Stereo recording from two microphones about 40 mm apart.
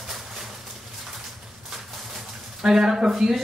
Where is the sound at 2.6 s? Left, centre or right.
Centre.